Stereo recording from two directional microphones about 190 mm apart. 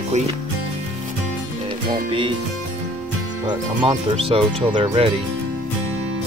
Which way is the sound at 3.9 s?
30° right (ahead or behind).